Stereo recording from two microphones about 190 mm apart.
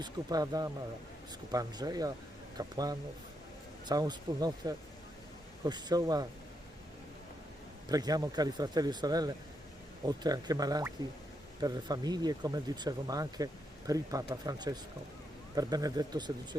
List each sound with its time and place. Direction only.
0.0 s speech: 20° right (ahead or behind)
7.9 s speech: 20° right (ahead or behind)